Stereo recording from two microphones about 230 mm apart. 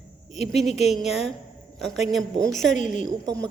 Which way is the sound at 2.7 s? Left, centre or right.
Left.